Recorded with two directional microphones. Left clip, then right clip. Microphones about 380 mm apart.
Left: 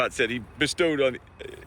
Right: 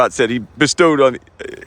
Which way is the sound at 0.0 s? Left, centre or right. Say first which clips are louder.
Right 10 dB; centre.